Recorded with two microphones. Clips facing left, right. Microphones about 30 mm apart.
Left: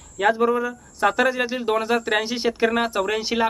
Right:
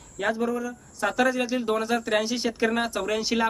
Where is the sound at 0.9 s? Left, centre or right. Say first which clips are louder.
Left 4 dB; left.